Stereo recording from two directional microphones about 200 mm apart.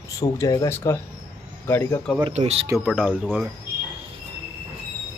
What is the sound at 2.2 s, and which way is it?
Speech, 30° right (ahead or behind).